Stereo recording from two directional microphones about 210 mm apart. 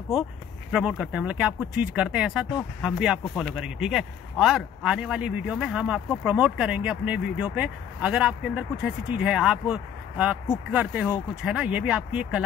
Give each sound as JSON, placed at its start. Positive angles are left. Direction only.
{"t": 0.1, "sound": "speech", "side_deg": 0}